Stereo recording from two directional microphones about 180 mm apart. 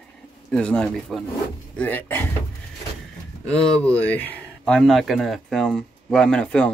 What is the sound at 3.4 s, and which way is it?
Speech, 5° left (ahead or behind).